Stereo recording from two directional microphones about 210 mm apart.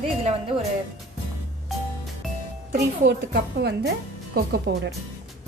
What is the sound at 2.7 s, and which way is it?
A woman's voice, 50° right (ahead or behind).